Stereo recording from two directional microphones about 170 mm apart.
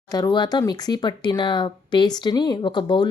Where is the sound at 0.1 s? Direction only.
25° left (ahead or behind).